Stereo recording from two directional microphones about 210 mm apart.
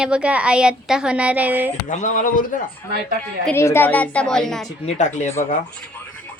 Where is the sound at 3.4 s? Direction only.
10° left (ahead or behind).